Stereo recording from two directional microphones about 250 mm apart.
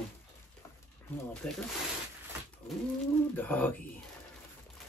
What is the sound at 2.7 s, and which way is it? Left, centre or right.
Speech, centre.